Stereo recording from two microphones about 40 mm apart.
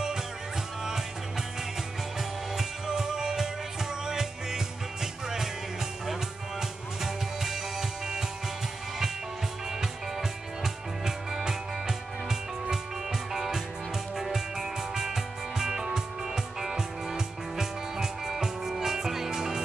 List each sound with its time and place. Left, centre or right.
2.5 s music: centre
10.6 s music: centre
13.3 s music: centre